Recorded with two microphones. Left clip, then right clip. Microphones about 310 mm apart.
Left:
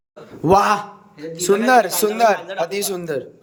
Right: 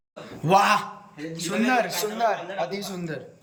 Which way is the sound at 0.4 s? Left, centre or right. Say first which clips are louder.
Left 4 dB; centre.